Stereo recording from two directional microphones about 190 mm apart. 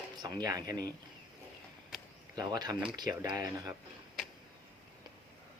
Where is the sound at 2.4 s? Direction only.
20° right (ahead or behind).